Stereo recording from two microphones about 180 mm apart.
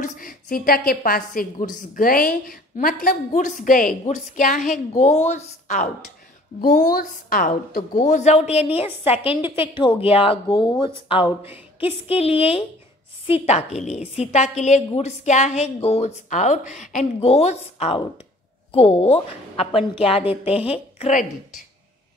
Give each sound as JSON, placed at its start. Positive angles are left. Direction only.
{"t": 0.0, "sound": "a woman's voice", "side_deg": 50}
{"t": 8.0, "sound": "a woman's voice", "side_deg": 40}